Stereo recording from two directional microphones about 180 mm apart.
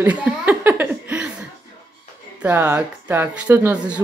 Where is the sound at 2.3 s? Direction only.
10° right (ahead or behind).